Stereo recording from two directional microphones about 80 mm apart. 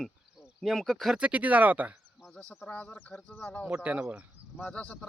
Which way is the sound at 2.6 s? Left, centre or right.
Centre.